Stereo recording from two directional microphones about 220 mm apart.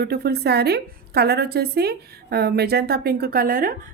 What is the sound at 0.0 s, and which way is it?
A woman's voice, 45° right (ahead or behind).